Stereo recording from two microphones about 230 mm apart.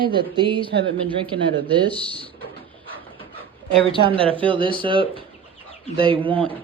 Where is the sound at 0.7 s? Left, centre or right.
Right.